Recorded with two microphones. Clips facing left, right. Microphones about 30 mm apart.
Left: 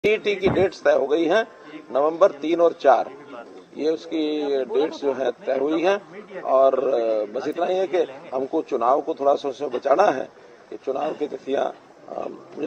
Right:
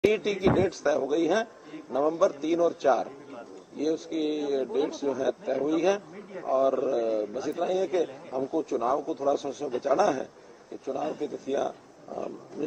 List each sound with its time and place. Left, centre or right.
0.2 s a man's voice: left